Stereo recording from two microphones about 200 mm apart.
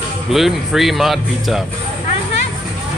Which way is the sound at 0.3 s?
Centre (ahead or behind).